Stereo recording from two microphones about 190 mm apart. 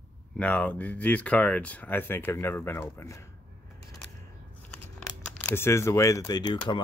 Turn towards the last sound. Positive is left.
turn(degrees=20)  # may be behind; listen again after turning